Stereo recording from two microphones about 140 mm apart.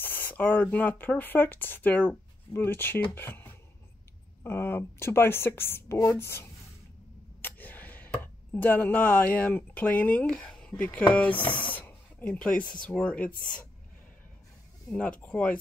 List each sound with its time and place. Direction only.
0.0 s speech: 15° left (ahead or behind)
7.4 s a sound: 15° left (ahead or behind)
8.5 s speech: 15° left (ahead or behind)
11.7 s a sound: 15° left (ahead or behind)
12.7 s speech: 5° left (ahead or behind)
14.9 s speech: 10° left (ahead or behind)